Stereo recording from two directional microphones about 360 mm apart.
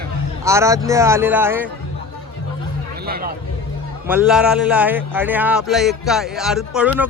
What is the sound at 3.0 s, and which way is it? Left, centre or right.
Speech, right.